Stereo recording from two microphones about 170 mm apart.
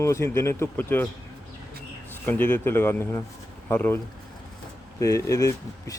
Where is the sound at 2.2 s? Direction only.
10° left (ahead or behind).